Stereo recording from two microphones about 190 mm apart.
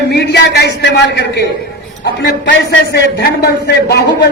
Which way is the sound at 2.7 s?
60° left (ahead or behind).